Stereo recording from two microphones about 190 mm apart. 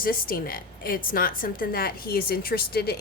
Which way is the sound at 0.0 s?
50° left (ahead or behind).